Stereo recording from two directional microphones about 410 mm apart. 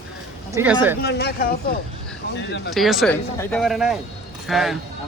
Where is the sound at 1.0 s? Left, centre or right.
Left.